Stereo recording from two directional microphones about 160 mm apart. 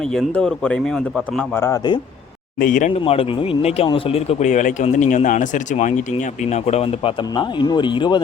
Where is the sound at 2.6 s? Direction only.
55° left (ahead or behind).